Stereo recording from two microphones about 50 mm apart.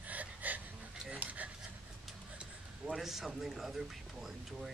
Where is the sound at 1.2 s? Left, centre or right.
Right.